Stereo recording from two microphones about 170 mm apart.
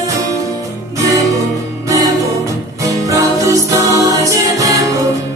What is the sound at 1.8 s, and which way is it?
Music, 20° right (ahead or behind).